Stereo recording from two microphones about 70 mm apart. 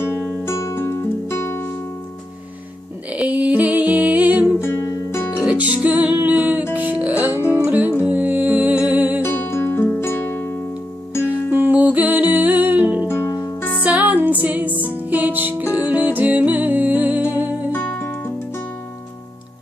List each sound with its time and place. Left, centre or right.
0.0 s music: left
0.4 s music: left
3.1 s music: centre
4.8 s music: left
5.5 s music: right
9.2 s music: left
11.5 s music: right
13.1 s music: left
13.6 s music: left
13.8 s music: centre
17.7 s music: left